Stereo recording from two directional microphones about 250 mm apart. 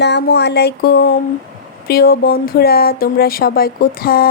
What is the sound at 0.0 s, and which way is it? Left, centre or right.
A woman's voice, left.